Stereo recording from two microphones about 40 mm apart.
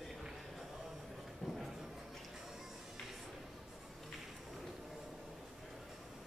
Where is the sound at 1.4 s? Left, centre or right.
Centre.